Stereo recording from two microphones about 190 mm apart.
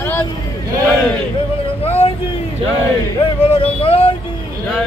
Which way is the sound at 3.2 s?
30° left (ahead or behind).